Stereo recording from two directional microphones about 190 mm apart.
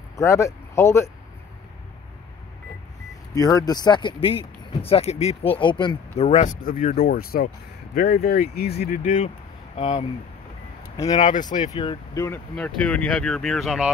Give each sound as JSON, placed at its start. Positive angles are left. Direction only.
{"t": 0.1, "sound": "speech", "side_deg": 15}
{"t": 3.3, "sound": "speech", "side_deg": 20}
{"t": 9.0, "sound": "speech", "side_deg": 40}
{"t": 11.1, "sound": "speech", "side_deg": 40}
{"t": 11.7, "sound": "speech", "side_deg": 25}